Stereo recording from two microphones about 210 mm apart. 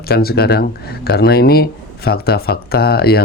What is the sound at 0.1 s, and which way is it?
Speech, 50° left (ahead or behind).